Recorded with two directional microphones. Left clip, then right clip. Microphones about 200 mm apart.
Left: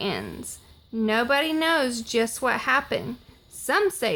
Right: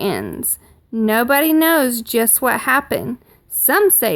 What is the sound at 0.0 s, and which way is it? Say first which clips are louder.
A woman's voice: right 8 dB; 45° right (ahead or behind).